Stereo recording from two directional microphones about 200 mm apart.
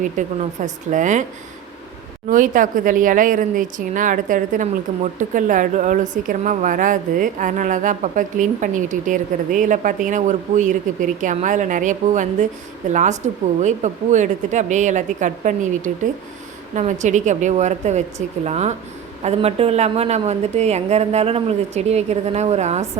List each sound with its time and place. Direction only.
0.2 s a woman's voice: 40° right (ahead or behind)
2.2 s a woman's voice: 40° right (ahead or behind)